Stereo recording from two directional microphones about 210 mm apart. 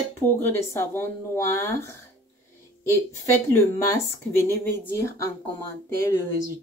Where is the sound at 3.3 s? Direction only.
10° left (ahead or behind).